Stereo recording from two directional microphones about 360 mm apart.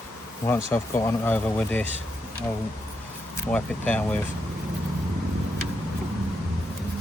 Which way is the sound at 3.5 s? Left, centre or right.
Centre.